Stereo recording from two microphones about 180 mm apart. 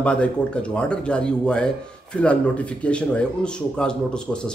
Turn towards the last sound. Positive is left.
turn(degrees=5)  # may be behind; listen again after turning